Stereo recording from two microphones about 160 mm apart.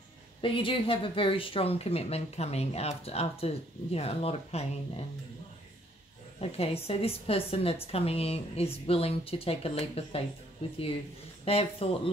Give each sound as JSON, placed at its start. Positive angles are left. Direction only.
{"t": 0.4, "sound": "speech", "side_deg": 35}
{"t": 6.4, "sound": "speech", "side_deg": 40}
{"t": 11.4, "sound": "speech", "side_deg": 40}